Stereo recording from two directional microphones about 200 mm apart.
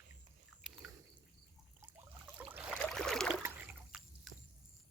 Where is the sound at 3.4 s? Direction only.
10° right (ahead or behind).